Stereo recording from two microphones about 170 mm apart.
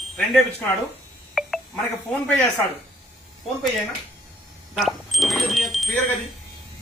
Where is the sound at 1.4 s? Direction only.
Centre (ahead or behind).